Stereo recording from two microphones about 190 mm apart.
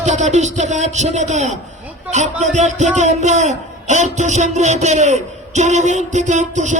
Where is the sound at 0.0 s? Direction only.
40° right (ahead or behind).